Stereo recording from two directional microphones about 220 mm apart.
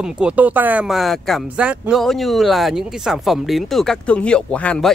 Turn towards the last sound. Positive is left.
turn(degrees=5)  # may be behind; listen again after turning